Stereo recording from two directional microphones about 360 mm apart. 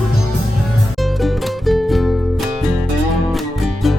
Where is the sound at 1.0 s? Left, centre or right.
Centre.